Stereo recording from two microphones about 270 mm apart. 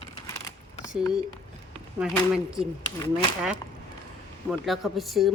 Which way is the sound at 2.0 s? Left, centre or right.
Centre.